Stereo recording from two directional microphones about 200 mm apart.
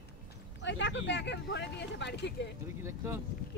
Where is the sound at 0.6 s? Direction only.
65° left (ahead or behind).